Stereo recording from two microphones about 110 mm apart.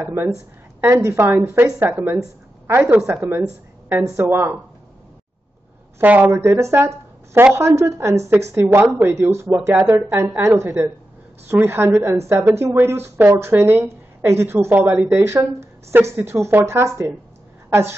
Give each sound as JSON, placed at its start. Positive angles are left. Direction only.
{"t": 0.0, "sound": "a woman's voice", "side_deg": -20}
{"t": 5.9, "sound": "a woman's voice", "side_deg": -15}